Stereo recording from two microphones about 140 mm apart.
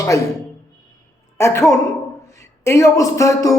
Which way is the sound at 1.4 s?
20° left (ahead or behind).